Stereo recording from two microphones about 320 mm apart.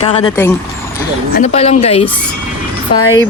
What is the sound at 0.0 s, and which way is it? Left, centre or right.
A woman's voice, centre.